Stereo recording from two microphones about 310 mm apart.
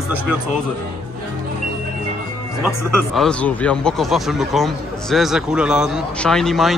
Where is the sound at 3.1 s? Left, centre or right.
Centre.